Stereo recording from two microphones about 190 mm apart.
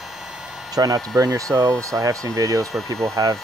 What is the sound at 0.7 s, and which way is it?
Speech, 20° right (ahead or behind).